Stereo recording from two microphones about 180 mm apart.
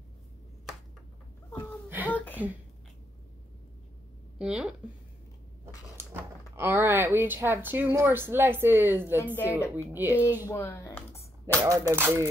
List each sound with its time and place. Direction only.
1.9 s a sound: 10° right (ahead or behind)
2.1 s a sound: 10° left (ahead or behind)
4.4 s speech: 5° right (ahead or behind)
5.9 s speech: 15° right (ahead or behind)
9.2 s a woman's voice: 10° left (ahead or behind)
9.8 s speech: 10° right (ahead or behind)
10.4 s speech: 15° left (ahead or behind)
11.5 s speech: 15° right (ahead or behind)